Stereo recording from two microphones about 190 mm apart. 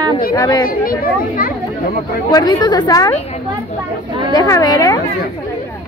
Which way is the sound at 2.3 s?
20° left (ahead or behind).